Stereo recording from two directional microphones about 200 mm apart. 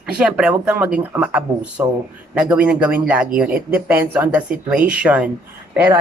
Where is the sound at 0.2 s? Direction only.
5° right (ahead or behind).